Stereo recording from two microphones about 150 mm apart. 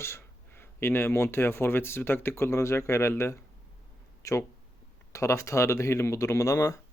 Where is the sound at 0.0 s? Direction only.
15° left (ahead or behind).